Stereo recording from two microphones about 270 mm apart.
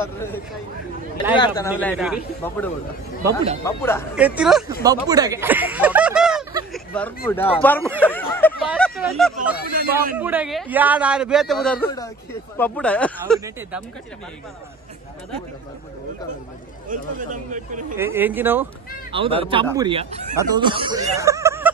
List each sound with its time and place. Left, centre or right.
1.3 s speech: centre
1.8 s a man's voice: centre
4.1 s a man's voice: centre
4.8 s speech: centre
6.7 s a sound: centre
7.2 s speech: centre
8.0 s a sound: centre
10.1 s a man's voice: centre
16.9 s speech: right
17.9 s speech: centre
19.1 s speech: centre